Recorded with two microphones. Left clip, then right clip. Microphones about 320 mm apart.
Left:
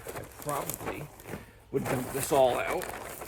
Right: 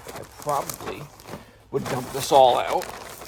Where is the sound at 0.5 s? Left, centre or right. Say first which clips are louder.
Right 7 dB; centre.